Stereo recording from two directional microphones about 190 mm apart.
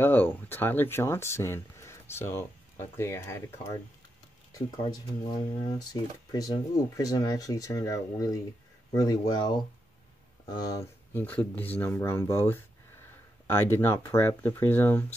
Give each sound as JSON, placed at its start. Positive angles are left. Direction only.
{"t": 0.0, "sound": "speech", "side_deg": 10}
{"t": 10.5, "sound": "speech", "side_deg": 20}
{"t": 13.6, "sound": "speech", "side_deg": 10}